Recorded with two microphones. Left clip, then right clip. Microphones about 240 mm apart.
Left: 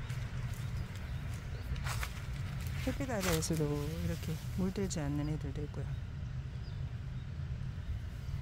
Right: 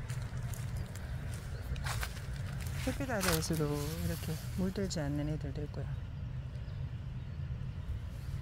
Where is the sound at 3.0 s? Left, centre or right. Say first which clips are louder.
Right 1 dB; centre.